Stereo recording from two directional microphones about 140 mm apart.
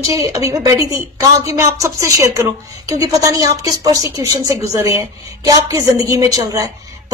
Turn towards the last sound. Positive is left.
turn(degrees=-25)  # may be behind; listen again after turning